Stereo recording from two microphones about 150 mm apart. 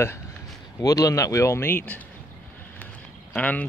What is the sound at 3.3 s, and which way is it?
Speech, 10° left (ahead or behind).